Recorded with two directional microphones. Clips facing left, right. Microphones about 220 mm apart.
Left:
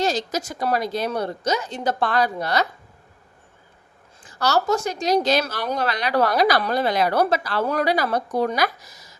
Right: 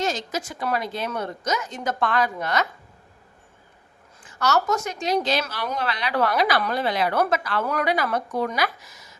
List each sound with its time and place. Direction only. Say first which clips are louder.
0.0 s a woman's voice: left 3 dB; 35° left (ahead or behind)
4.2 s a woman's voice: left 1 dB; 35° left (ahead or behind)